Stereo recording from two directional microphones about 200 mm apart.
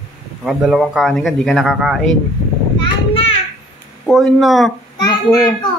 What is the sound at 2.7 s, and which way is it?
Children playing, 25° left (ahead or behind).